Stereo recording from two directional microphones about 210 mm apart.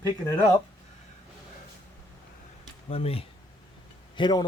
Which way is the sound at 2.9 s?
30° left (ahead or behind).